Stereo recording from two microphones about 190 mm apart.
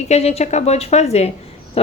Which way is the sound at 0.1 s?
35° left (ahead or behind).